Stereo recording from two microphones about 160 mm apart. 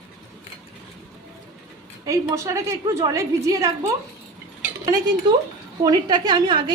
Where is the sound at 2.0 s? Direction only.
20° right (ahead or behind).